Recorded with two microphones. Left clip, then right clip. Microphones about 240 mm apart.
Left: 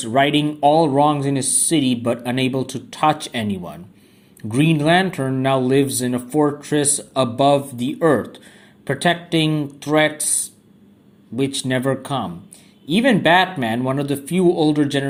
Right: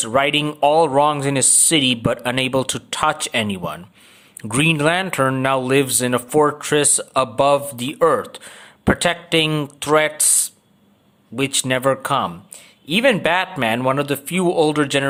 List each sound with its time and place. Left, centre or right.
0.0 s speech: right
11.3 s speech: right